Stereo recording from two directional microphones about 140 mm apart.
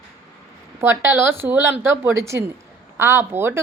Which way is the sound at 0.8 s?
15° right (ahead or behind).